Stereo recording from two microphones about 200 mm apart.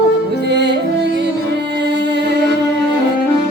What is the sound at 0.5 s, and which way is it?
Music, 60° right (ahead or behind).